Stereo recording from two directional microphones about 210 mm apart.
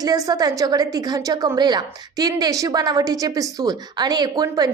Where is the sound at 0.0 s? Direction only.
20° right (ahead or behind).